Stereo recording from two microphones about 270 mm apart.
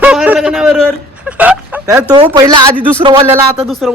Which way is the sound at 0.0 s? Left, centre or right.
Centre.